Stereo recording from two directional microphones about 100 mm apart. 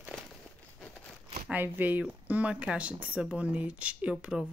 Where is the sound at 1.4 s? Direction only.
20° right (ahead or behind).